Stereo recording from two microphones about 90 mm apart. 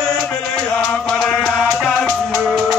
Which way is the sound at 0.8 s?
5° left (ahead or behind).